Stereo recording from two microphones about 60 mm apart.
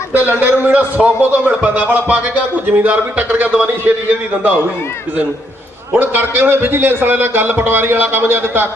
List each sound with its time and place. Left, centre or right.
0.1 s a man's voice: right
5.9 s a man's voice: right